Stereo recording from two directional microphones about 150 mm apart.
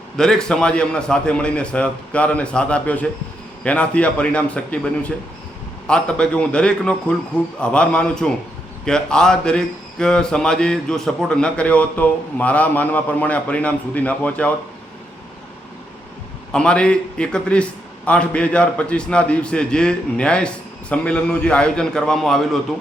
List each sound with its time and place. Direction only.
0.2 s a man's voice: 5° left (ahead or behind)
16.5 s a man's voice: 5° left (ahead or behind)